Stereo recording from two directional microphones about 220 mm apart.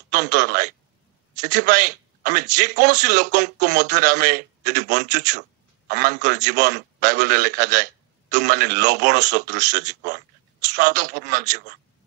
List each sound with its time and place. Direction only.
0.1 s a man's voice: 35° right (ahead or behind)